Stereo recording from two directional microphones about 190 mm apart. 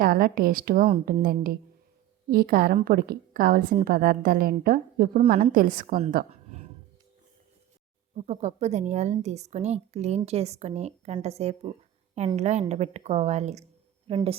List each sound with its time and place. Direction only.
0.0 s a woman's voice: 50° right (ahead or behind)
8.1 s a woman's voice: 35° right (ahead or behind)